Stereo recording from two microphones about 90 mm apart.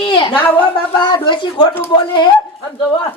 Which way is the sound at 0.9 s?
55° left (ahead or behind).